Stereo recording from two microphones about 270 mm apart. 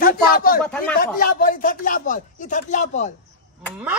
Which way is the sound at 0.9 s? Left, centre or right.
Left.